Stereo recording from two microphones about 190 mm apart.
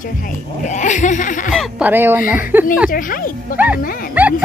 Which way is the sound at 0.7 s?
40° left (ahead or behind).